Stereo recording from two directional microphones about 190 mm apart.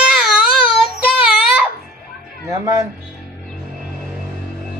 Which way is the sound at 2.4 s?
20° right (ahead or behind).